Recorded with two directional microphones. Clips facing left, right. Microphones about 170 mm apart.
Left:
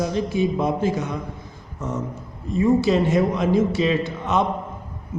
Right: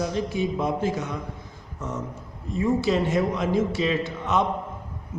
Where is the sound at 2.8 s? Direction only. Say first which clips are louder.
Left 4 dB; 20° left (ahead or behind).